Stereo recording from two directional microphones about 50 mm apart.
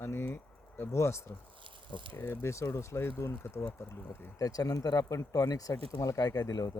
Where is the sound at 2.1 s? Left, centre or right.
Left.